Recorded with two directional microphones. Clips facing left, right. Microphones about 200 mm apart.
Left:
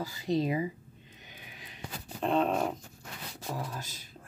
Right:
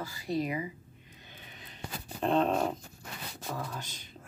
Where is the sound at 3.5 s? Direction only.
10° left (ahead or behind).